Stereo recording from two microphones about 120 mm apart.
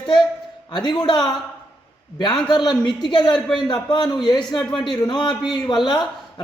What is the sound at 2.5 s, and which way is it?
Speech, 40° left (ahead or behind).